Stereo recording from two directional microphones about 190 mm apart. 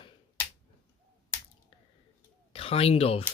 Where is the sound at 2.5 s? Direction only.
30° left (ahead or behind).